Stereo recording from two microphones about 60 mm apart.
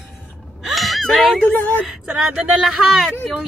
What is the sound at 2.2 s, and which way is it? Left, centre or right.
Speech, centre.